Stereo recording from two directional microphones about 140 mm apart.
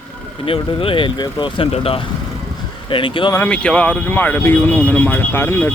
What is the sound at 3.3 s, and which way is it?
Speech, 10° left (ahead or behind).